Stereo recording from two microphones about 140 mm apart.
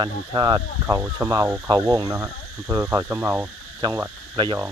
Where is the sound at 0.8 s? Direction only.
20° right (ahead or behind).